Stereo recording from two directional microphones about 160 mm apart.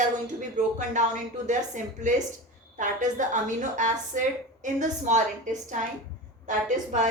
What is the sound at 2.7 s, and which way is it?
A woman's voice, 50° right (ahead or behind).